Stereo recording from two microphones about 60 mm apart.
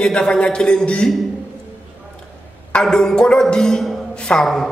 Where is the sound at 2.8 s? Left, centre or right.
Centre.